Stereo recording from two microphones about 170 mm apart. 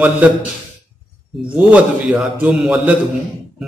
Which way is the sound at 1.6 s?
5° right (ahead or behind).